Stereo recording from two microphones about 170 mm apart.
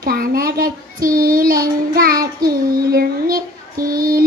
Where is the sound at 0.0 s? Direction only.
60° right (ahead or behind).